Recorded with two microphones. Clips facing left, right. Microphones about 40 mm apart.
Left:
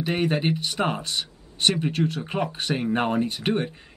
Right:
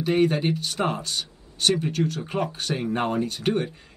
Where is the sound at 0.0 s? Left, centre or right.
Left.